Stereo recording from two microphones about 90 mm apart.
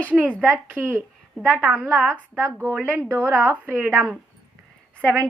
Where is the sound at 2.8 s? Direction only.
30° right (ahead or behind).